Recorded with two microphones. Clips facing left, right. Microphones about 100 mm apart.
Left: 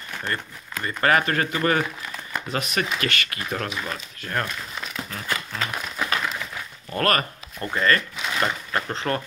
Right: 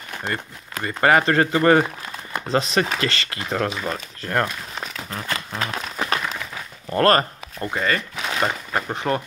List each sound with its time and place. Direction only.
0.2 s speech: 25° right (ahead or behind)
5.5 s crumpling: 25° right (ahead or behind)
6.9 s speech: 30° right (ahead or behind)